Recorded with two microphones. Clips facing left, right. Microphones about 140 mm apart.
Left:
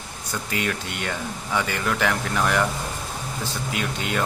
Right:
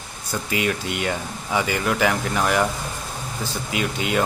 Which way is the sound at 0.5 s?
5° right (ahead or behind).